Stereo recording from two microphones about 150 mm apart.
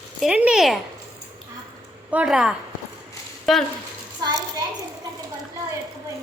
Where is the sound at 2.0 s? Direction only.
5° right (ahead or behind).